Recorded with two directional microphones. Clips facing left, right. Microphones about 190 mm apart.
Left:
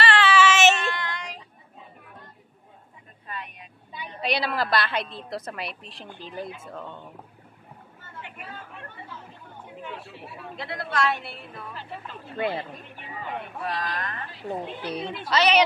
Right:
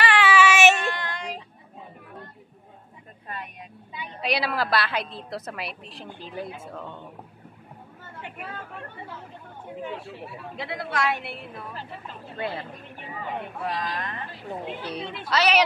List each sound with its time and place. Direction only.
0.0 s child singing: 15° right (ahead or behind)
0.9 s child singing: 45° right (ahead or behind)
4.2 s a woman's voice: centre (ahead or behind)
10.5 s speech: 10° right (ahead or behind)
12.4 s speech: 20° left (ahead or behind)
13.7 s speech: 15° right (ahead or behind)
15.2 s a woman's voice: 5° right (ahead or behind)